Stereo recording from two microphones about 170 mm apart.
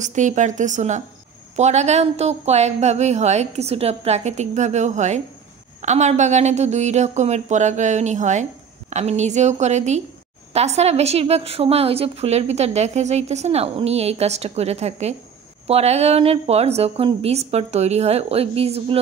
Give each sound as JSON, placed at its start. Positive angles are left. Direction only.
{"t": 0.0, "sound": "a woman's voice", "side_deg": -45}